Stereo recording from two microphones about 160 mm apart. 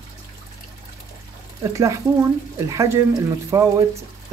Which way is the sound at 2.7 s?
20° right (ahead or behind).